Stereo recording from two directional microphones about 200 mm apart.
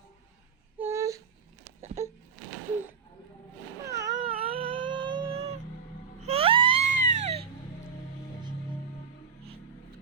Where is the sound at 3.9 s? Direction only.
15° right (ahead or behind).